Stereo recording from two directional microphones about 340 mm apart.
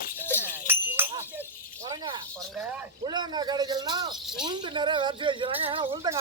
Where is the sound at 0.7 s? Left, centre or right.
Centre.